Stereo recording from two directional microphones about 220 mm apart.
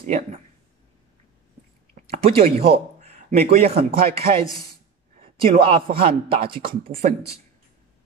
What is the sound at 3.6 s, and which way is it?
Speech, 25° right (ahead or behind).